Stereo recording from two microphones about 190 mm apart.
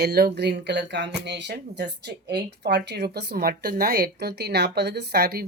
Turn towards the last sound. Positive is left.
turn(degrees=-55)  # may be behind; listen again after turning